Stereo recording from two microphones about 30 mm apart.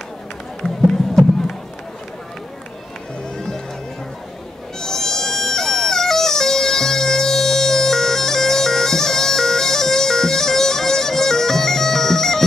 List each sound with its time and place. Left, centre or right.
0.6 s music: centre
4.7 s music: centre